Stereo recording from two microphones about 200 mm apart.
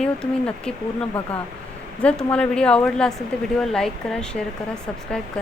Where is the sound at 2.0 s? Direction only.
5° left (ahead or behind).